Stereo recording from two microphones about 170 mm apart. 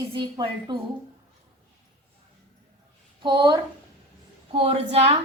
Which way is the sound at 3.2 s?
30° right (ahead or behind).